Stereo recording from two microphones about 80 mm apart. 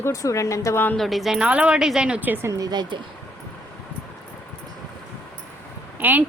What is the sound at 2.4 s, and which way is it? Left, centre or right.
Speech, right.